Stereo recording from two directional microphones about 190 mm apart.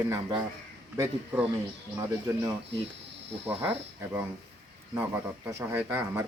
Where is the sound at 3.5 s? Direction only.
10° right (ahead or behind).